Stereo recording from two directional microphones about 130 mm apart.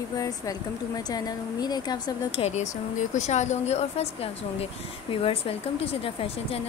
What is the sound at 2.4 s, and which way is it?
A woman's voice, 65° left (ahead or behind).